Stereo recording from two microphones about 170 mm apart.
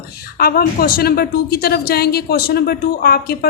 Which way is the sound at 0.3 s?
60° left (ahead or behind).